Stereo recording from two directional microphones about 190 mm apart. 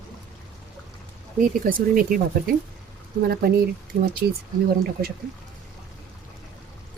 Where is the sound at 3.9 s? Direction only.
45° right (ahead or behind).